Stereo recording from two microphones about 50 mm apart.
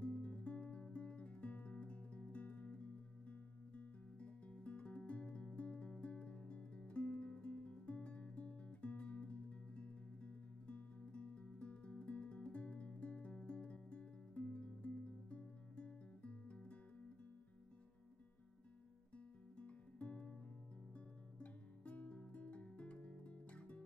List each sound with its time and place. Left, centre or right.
0.0 s music: left
19.1 s guitar: left
20.9 s music: left